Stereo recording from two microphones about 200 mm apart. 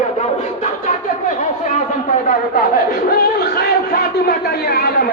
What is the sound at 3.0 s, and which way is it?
Speech, 50° left (ahead or behind).